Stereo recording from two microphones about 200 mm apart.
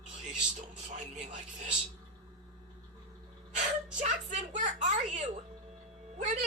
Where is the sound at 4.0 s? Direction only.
40° right (ahead or behind).